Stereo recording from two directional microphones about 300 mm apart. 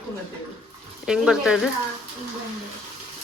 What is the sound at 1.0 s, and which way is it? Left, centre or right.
Speech, centre.